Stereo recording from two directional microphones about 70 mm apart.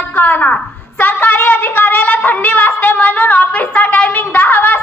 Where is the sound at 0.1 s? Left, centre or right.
Left.